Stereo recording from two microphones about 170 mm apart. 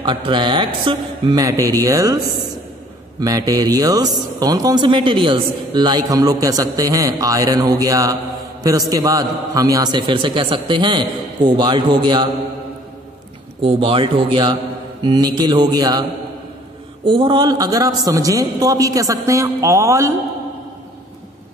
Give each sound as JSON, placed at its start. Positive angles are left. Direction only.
{"t": 0.0, "sound": "speech", "side_deg": -30}
{"t": 3.2, "sound": "speech", "side_deg": -20}
{"t": 13.6, "sound": "speech", "side_deg": -30}